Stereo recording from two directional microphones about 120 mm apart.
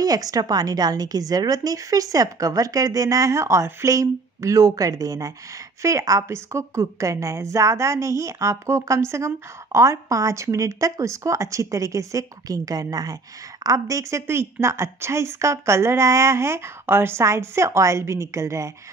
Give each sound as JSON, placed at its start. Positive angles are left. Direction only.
{"t": 0.0, "sound": "a woman's voice", "side_deg": -30}